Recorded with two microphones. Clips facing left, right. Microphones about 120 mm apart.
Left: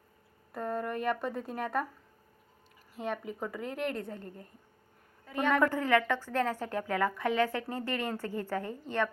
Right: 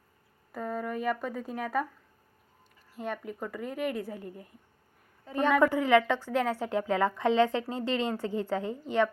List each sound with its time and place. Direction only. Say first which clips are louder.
0.5 s a woman's voice: even; centre (ahead or behind)
3.0 s a woman's voice: even; centre (ahead or behind)
5.2 s a woman's voice: right 4 dB; 35° right (ahead or behind)
5.5 s a woman's voice: right 4 dB; 15° right (ahead or behind)